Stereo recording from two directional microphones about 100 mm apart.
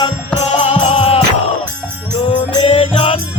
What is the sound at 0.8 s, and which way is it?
Music, 70° left (ahead or behind).